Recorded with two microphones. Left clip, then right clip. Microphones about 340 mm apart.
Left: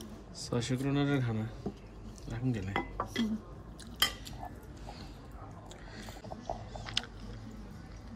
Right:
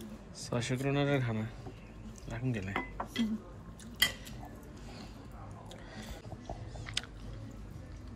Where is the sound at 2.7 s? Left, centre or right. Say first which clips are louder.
Left 4 dB; left.